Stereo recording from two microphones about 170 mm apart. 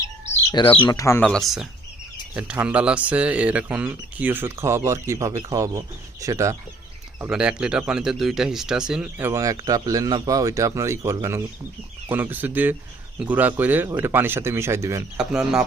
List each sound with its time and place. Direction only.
0.5 s speech: 30° left (ahead or behind)
1.2 s speech: 5° left (ahead or behind); by 6.6 s 20° right (ahead or behind)
7.2 s speech: 5° right (ahead or behind)
15.2 s speech: 5° right (ahead or behind)